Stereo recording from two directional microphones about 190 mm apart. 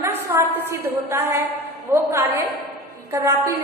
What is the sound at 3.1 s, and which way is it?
Speech, 15° right (ahead or behind).